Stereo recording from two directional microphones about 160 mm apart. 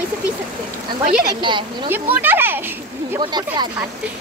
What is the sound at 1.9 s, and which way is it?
Speech, 10° right (ahead or behind).